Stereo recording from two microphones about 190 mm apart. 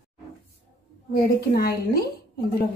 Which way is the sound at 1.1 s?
50° left (ahead or behind).